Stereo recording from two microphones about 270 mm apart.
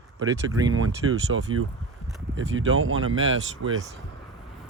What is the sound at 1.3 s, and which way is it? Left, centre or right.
Speech, right.